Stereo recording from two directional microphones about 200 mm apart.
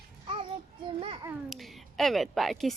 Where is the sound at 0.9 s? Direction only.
25° right (ahead or behind).